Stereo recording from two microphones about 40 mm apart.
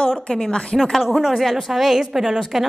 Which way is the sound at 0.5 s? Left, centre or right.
Left.